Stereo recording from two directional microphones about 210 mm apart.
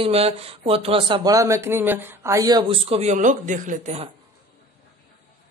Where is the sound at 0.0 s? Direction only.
30° right (ahead or behind).